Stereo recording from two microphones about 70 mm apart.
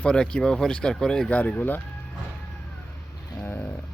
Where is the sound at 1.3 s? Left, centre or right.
Left.